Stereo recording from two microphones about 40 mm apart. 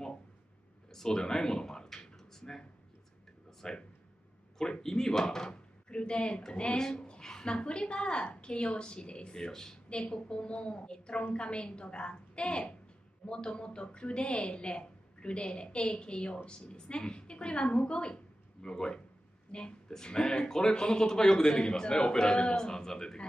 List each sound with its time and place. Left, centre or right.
0.9 s speech: centre
3.6 s a woman's voice: centre
9.8 s a woman's voice: left